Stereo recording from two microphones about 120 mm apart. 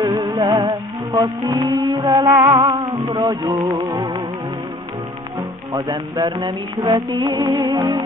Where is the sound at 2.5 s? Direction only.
50° right (ahead or behind).